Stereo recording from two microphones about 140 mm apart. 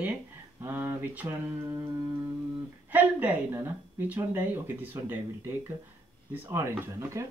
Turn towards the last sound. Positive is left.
turn(degrees=-20)  # may be behind; listen again after turning